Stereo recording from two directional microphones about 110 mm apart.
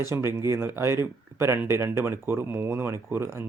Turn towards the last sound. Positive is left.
turn(degrees=-20)  # may be behind; listen again after turning